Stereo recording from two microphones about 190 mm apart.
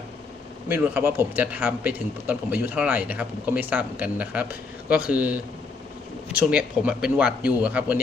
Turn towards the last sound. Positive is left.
turn(degrees=-10)  # may be behind; listen again after turning